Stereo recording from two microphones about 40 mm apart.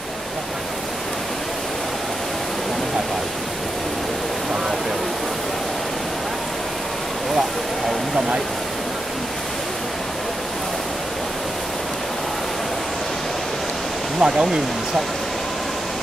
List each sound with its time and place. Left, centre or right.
14.2 s speech: centre